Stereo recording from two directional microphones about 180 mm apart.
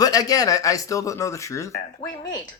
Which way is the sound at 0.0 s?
20° left (ahead or behind).